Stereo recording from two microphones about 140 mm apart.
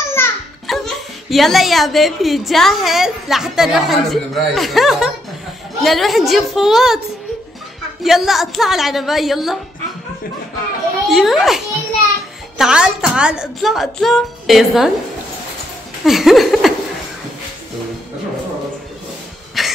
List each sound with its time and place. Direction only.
0.0 s children playing: 15° left (ahead or behind)
0.7 s speech: centre (ahead or behind)
8.0 s speech: centre (ahead or behind)
11.1 s speech: centre (ahead or behind)
16.0 s a sound: centre (ahead or behind)
19.6 s cough: centre (ahead or behind)